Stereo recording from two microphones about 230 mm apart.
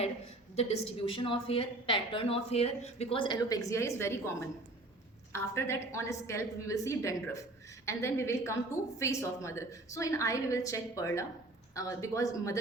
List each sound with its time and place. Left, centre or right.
0.5 s a woman's voice: left